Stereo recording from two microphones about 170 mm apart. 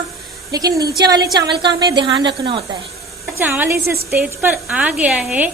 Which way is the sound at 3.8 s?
65° right (ahead or behind).